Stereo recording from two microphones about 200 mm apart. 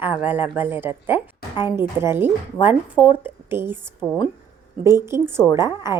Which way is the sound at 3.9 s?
Centre (ahead or behind).